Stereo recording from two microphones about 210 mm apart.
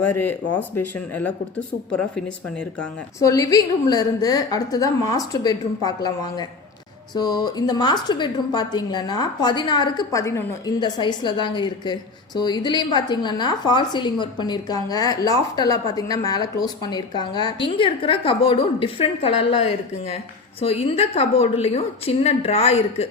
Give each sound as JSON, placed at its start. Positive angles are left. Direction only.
{"t": 0.0, "sound": "a woman's voice", "side_deg": 10}
{"t": 3.2, "sound": "a woman's voice", "side_deg": 15}